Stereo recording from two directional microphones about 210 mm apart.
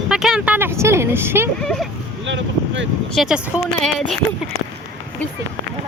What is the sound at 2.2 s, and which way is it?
Boat, 60° right (ahead or behind).